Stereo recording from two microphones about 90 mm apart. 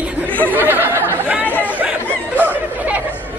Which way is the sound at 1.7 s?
15° right (ahead or behind).